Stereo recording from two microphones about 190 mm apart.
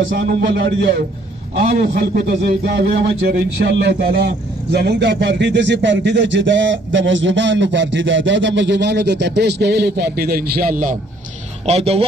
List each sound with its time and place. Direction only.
0.2 s a man's voice: 55° right (ahead or behind)
11.6 s a man's voice: 35° right (ahead or behind)